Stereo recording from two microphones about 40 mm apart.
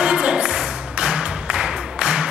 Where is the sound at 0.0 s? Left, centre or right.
Right.